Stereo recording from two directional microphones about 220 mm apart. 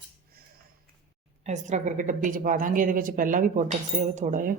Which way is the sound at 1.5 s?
35° right (ahead or behind).